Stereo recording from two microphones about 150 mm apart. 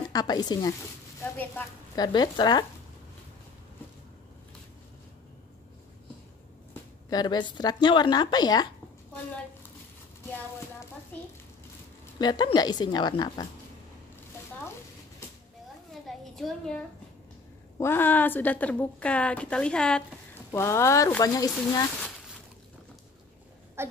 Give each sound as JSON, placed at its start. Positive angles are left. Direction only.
{"t": 0.1, "sound": "speech", "side_deg": 25}
{"t": 2.0, "sound": "speech", "side_deg": 30}
{"t": 7.1, "sound": "speech", "side_deg": 30}
{"t": 12.2, "sound": "speech", "side_deg": 30}
{"t": 15.9, "sound": "a sound", "side_deg": 0}
{"t": 17.7, "sound": "a woman's voice", "side_deg": 15}
{"t": 20.5, "sound": "speech", "side_deg": 20}
{"t": 23.8, "sound": "a sound", "side_deg": -15}